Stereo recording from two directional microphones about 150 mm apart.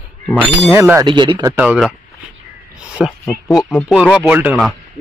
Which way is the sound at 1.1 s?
30° right (ahead or behind).